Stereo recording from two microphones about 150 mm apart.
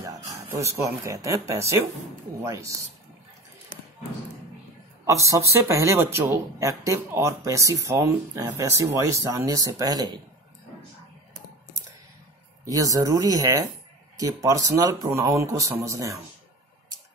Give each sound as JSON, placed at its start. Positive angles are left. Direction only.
{"t": 0.0, "sound": "speech", "side_deg": -20}
{"t": 5.0, "sound": "speech", "side_deg": -20}
{"t": 12.6, "sound": "speech", "side_deg": -25}